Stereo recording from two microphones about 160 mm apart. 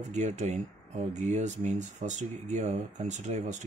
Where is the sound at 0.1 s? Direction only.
45° right (ahead or behind).